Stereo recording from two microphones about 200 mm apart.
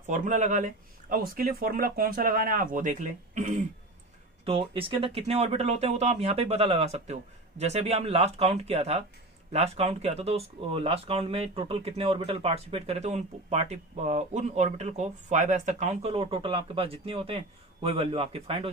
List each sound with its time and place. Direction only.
0.0 s a man's voice: 40° right (ahead or behind)